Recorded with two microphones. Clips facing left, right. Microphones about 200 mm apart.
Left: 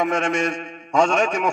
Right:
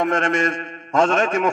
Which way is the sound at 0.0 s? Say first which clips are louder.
Right 1 dB; centre (ahead or behind).